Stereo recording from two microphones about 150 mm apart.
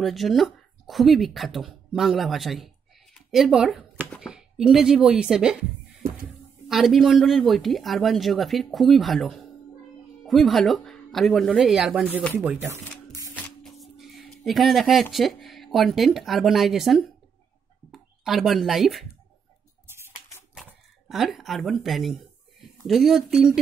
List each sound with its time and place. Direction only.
0.0 s speech: centre (ahead or behind)
6.7 s speech: centre (ahead or behind)
12.2 s speech: 5° left (ahead or behind)
12.4 s music: 20° right (ahead or behind)
13.7 s speech: centre (ahead or behind)
21.1 s speech: centre (ahead or behind)